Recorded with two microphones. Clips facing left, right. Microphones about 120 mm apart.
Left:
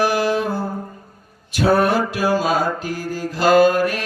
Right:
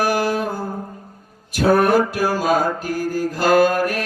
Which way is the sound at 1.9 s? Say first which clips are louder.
Right 1 dB; 50° right (ahead or behind).